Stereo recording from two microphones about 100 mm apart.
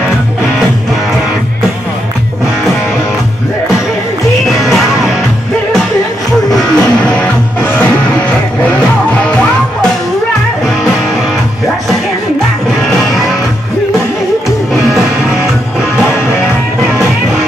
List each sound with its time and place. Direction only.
4.5 s music: centre (ahead or behind)
6.5 s music: 10° left (ahead or behind)
7.6 s music: 20° left (ahead or behind)